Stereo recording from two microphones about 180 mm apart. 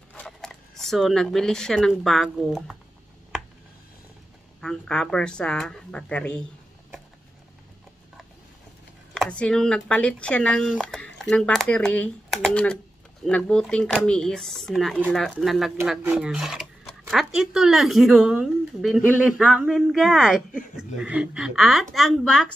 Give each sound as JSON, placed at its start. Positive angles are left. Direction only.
{"t": 0.1, "sound": "speech", "side_deg": 5}
{"t": 4.6, "sound": "speech", "side_deg": 5}
{"t": 9.1, "sound": "speech", "side_deg": 5}